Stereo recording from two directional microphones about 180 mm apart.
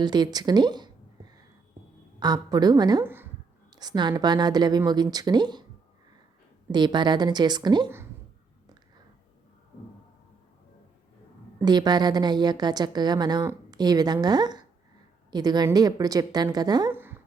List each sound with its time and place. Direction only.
0.0 s a woman's voice: 25° right (ahead or behind)
3.7 s a sound: 20° right (ahead or behind)
4.1 s a woman's voice: 25° right (ahead or behind)
6.7 s a woman's voice: 25° right (ahead or behind)
11.6 s a woman's voice: 25° right (ahead or behind)
16.9 s a sound: 10° right (ahead or behind)